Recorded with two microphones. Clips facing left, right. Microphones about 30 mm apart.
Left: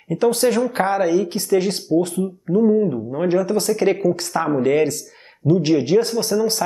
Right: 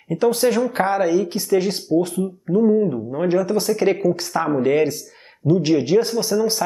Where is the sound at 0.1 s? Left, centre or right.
Centre.